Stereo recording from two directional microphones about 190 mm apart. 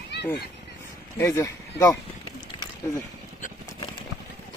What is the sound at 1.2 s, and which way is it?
Speech, 15° left (ahead or behind).